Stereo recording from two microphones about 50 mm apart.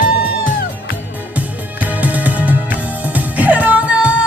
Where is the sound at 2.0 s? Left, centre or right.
Right.